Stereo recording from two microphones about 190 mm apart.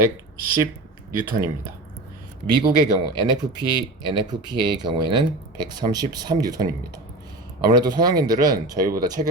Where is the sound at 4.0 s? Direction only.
20° right (ahead or behind).